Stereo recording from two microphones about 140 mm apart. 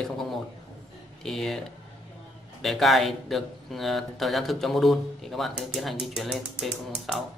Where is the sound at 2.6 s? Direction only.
Centre (ahead or behind).